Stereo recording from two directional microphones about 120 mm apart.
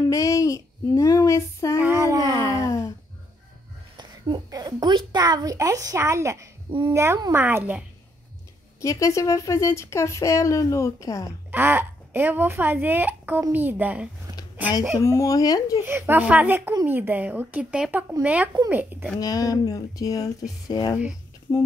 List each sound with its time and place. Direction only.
0.1 s child singing: 25° left (ahead or behind)
1.8 s a sound: 20° right (ahead or behind)
2.6 s a sound: 25° left (ahead or behind)
3.9 s a woman's voice: 35° right (ahead or behind); by 7.8 s 15° right (ahead or behind)
8.8 s a woman's voice: 25° left (ahead or behind)
11.5 s speech: 20° right (ahead or behind)
15.0 s a woman's voice: 25° left (ahead or behind)
15.8 s speech: 15° right (ahead or behind)
19.1 s a woman's voice: 30° left (ahead or behind)